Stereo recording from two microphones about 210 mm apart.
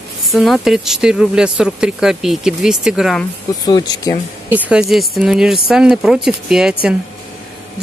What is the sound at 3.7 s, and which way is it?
Speech, 20° left (ahead or behind).